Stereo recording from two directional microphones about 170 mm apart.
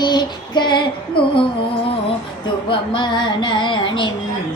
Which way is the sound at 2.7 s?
25° left (ahead or behind).